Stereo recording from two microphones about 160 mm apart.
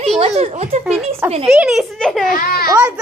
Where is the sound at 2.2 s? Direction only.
65° left (ahead or behind).